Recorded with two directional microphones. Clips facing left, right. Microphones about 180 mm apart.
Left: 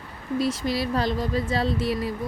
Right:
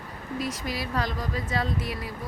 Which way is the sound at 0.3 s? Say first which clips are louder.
Left 7 dB; 30° left (ahead or behind).